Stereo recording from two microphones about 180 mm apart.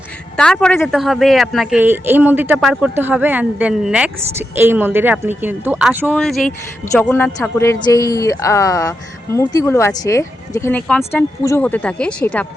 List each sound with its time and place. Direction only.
0.3 s a woman's voice: 5° left (ahead or behind); by 6.1 s 10° right (ahead or behind)
6.1 s speech: centre (ahead or behind)
6.9 s a man's voice: 10° left (ahead or behind)